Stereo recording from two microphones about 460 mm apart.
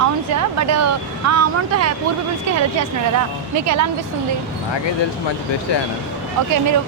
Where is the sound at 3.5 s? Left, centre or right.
Right.